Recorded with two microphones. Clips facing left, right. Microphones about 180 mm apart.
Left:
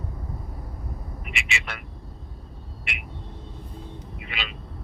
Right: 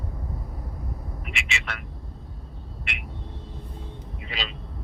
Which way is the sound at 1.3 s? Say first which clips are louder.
Left 1 dB; centre (ahead or behind).